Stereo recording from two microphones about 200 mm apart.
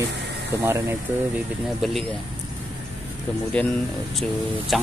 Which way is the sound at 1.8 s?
Centre (ahead or behind).